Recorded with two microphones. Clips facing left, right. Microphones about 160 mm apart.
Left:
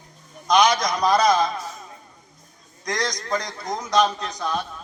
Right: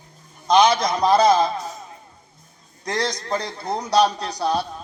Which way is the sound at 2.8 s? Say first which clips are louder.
Right 2 dB; 30° right (ahead or behind).